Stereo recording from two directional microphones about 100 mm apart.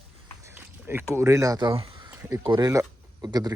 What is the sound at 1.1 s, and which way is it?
Speech, 30° right (ahead or behind).